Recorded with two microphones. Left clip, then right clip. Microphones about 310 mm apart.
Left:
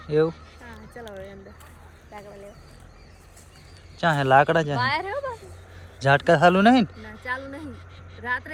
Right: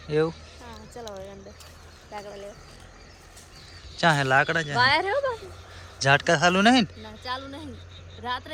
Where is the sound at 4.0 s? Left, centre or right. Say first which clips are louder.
Left 2 dB; centre.